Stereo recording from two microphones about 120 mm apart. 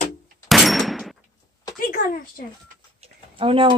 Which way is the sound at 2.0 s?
90° left.